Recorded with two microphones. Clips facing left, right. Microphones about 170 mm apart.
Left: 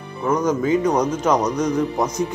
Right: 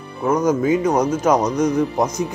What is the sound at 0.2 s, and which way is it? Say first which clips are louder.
Speech: right 2 dB; 10° right (ahead or behind).